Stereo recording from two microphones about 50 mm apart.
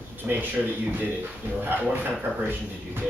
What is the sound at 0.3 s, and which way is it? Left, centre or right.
Speech, right.